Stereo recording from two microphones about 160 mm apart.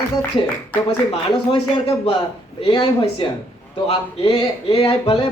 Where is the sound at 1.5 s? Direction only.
40° left (ahead or behind).